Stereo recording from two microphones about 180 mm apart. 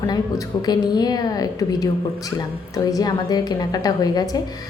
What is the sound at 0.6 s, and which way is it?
A woman's voice, 20° left (ahead or behind).